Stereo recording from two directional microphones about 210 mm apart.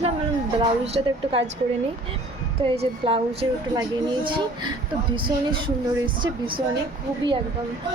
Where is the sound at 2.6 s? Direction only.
25° right (ahead or behind).